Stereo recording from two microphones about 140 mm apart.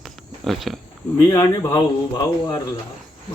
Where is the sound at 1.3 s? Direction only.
25° left (ahead or behind).